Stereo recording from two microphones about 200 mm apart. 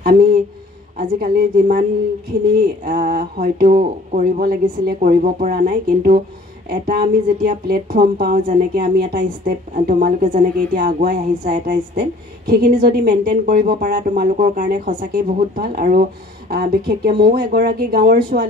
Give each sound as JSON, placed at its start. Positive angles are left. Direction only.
{"t": 0.0, "sound": "a woman's voice", "side_deg": -45}